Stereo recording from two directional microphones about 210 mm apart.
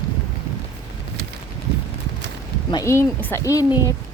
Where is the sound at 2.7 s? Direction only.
15° left (ahead or behind).